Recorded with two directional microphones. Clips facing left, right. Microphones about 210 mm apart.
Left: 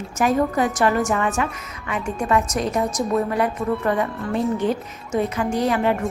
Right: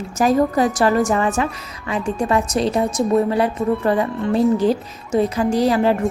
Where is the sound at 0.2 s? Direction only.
35° right (ahead or behind).